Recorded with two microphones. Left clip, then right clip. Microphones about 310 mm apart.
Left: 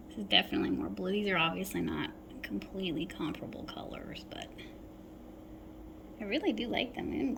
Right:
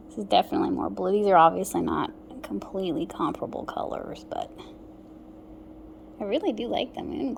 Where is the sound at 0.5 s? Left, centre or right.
Right.